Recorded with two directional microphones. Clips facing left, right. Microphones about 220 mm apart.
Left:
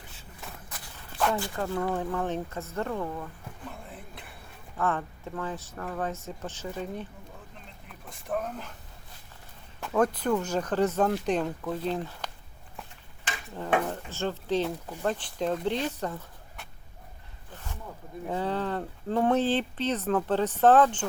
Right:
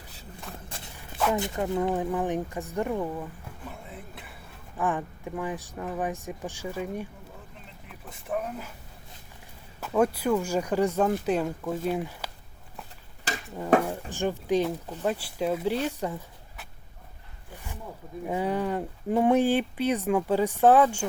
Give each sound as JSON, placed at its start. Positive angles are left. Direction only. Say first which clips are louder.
{"t": 0.9, "sound": "a sound", "louder": "right 1 dB", "side_deg": -5}
{"t": 1.4, "sound": "speech", "louder": "right 3 dB", "side_deg": -20}
{"t": 4.8, "sound": "speech", "louder": "right 1 dB", "side_deg": -15}
{"t": 7.9, "sound": "a sound", "louder": "even", "side_deg": -5}
{"t": 9.8, "sound": "speech", "louder": "right 1 dB", "side_deg": -5}
{"t": 13.3, "sound": "a sound", "louder": "right 4 dB", "side_deg": -40}
{"t": 13.8, "sound": "speech", "louder": "right 2 dB", "side_deg": -10}
{"t": 17.5, "sound": "zipper", "louder": "right 1 dB", "side_deg": -10}
{"t": 18.3, "sound": "speech", "louder": "right 2 dB", "side_deg": -10}